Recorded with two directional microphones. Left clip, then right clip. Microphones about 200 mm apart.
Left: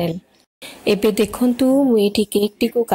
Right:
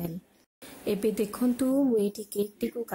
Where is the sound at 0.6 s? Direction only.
10° left (ahead or behind).